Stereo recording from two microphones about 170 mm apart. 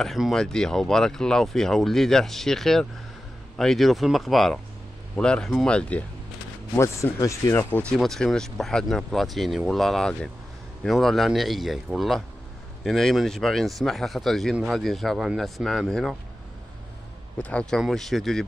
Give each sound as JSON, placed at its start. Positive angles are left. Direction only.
{"t": 0.0, "sound": "speech", "side_deg": 0}
{"t": 8.0, "sound": "speech", "side_deg": 0}
{"t": 17.4, "sound": "speech", "side_deg": 5}